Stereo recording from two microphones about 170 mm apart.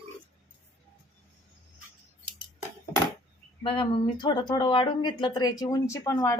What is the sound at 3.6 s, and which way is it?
Speech, 30° left (ahead or behind).